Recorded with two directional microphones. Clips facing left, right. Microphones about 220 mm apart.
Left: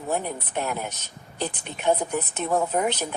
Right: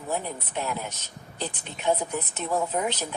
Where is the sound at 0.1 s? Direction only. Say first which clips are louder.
Left 3 dB; 55° left (ahead or behind).